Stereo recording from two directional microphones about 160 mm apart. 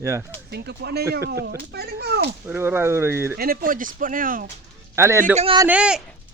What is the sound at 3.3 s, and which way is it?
Speech, 65° right (ahead or behind).